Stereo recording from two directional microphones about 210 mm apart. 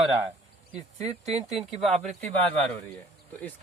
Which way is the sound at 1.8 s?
Centre (ahead or behind).